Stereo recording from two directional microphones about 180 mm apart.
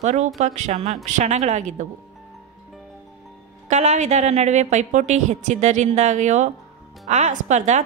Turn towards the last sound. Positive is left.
turn(degrees=-40)  # may be behind; listen again after turning